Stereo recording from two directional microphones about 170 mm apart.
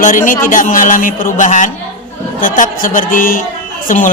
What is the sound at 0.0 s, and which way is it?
A man's voice, 50° left (ahead or behind).